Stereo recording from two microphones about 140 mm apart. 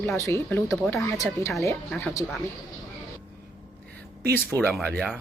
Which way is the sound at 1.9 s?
5° left (ahead or behind).